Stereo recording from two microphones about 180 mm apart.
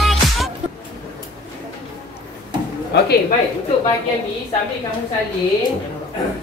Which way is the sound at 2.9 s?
65° left (ahead or behind).